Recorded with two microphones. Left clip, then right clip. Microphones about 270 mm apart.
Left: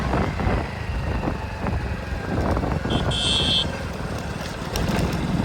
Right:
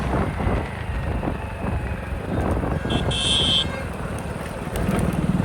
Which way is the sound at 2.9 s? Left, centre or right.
Right.